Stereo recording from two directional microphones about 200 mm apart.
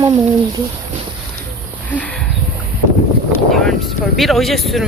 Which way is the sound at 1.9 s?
5° left (ahead or behind).